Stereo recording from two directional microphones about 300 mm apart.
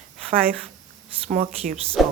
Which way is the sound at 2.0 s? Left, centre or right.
Centre.